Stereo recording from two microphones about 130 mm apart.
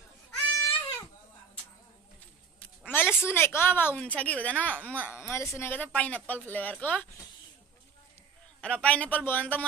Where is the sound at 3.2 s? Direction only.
20° left (ahead or behind).